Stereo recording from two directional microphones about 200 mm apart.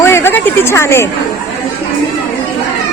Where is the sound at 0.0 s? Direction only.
10° left (ahead or behind).